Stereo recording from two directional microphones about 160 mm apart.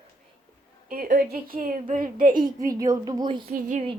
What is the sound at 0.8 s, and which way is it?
A woman's voice, 60° right (ahead or behind).